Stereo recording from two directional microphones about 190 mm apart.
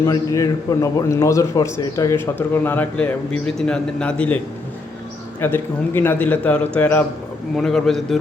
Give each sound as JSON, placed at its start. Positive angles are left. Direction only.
{"t": 0.0, "sound": "a man's voice", "side_deg": 15}
{"t": 5.4, "sound": "a man's voice", "side_deg": 10}